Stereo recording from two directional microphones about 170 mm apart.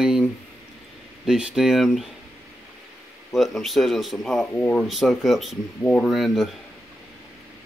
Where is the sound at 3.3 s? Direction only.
Centre (ahead or behind).